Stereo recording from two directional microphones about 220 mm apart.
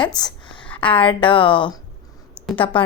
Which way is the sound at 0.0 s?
20° left (ahead or behind).